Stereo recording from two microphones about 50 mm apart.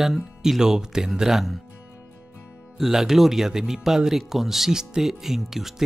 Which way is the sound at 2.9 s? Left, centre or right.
Centre.